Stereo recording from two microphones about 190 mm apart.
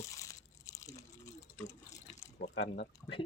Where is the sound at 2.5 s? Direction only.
65° left (ahead or behind).